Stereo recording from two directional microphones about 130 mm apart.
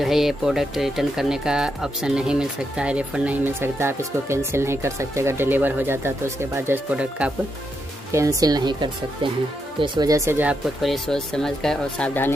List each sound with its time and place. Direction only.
0.0 s speech: centre (ahead or behind)
8.1 s speech: 25° right (ahead or behind)
10.8 s speech: centre (ahead or behind)